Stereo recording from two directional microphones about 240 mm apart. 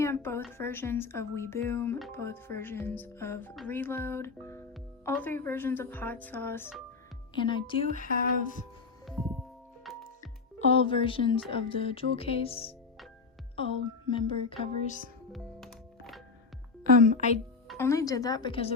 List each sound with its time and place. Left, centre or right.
0.0 s a woman's voice: centre
7.3 s speech: centre
7.9 s music: left
9.0 s music: centre
10.6 s speech: left
15.3 s music: centre
16.8 s speech: right
17.2 s speech: left
17.7 s speech: centre